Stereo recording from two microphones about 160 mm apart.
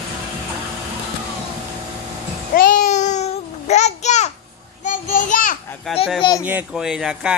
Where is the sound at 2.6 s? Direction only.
55° left (ahead or behind).